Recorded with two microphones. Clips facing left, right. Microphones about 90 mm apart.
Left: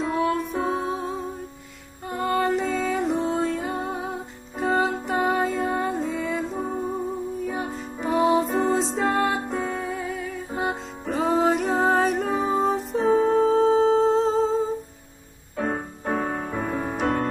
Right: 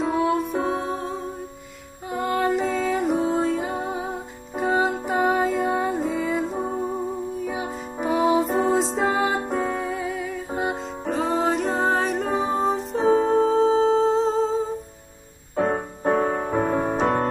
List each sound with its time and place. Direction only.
0.0 s music: centre (ahead or behind)
6.6 s music: 15° right (ahead or behind)
7.4 s music: 5° right (ahead or behind)
15.5 s music: 35° right (ahead or behind)